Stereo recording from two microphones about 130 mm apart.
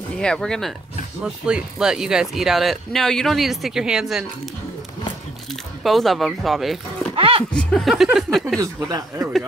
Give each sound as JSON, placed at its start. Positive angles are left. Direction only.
{"t": 0.2, "sound": "speech", "side_deg": 5}
{"t": 5.9, "sound": "speech", "side_deg": 0}
{"t": 7.2, "sound": "a sound", "side_deg": -45}
{"t": 7.5, "sound": "speech", "side_deg": 5}
{"t": 8.5, "sound": "speech", "side_deg": -25}